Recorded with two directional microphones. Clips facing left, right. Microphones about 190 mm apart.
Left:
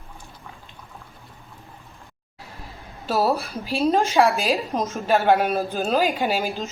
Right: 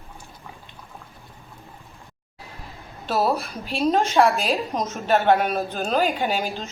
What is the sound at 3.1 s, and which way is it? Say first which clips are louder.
A woman's voice: left 1 dB; 5° left (ahead or behind).